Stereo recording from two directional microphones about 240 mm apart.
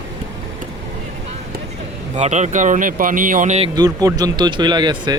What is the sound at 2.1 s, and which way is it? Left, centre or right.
Speech, right.